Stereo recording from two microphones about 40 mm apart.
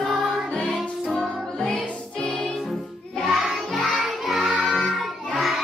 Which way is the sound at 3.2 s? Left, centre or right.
Centre.